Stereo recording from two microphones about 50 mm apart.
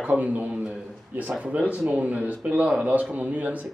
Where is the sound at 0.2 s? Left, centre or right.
Right.